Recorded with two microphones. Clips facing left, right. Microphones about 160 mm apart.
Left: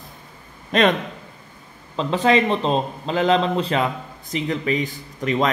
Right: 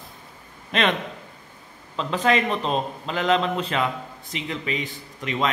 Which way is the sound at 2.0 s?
30° left (ahead or behind).